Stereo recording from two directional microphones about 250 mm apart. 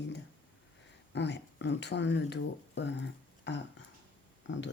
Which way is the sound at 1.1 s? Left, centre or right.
Left.